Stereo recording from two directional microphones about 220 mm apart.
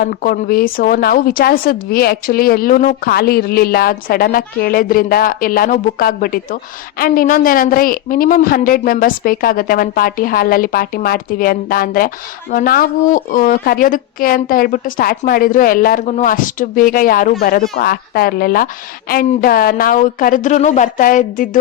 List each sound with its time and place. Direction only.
0.0 s speech: 40° left (ahead or behind)